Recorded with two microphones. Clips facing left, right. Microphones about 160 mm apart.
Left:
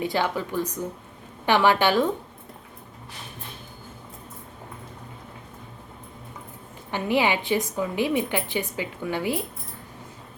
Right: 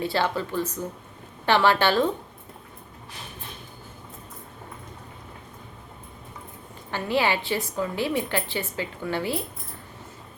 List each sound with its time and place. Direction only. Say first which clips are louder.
0.0 s a woman's voice: even; 15° left (ahead or behind)
6.9 s a woman's voice: left 1 dB; 15° left (ahead or behind)